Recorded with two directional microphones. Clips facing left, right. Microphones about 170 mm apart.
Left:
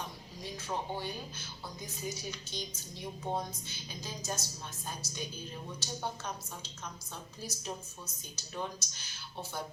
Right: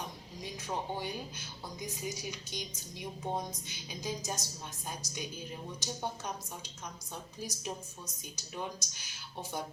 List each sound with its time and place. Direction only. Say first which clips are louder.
0.5 s speech: even; 15° right (ahead or behind)